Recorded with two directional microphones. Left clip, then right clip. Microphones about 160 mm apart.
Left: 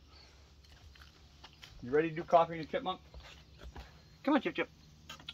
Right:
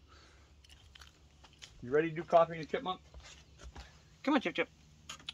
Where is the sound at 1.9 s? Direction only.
85° right.